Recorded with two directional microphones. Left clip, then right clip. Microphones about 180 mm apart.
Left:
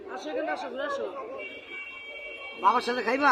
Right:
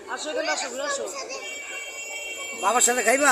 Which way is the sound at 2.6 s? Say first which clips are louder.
Right 3 dB; 20° right (ahead or behind).